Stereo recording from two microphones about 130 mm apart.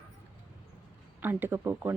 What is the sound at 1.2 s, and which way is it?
Speech, 15° right (ahead or behind).